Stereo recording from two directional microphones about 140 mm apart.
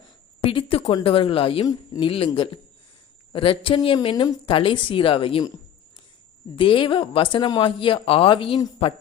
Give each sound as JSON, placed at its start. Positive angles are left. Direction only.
{"t": 0.4, "sound": "a woman's voice", "side_deg": 40}
{"t": 6.6, "sound": "speech", "side_deg": 40}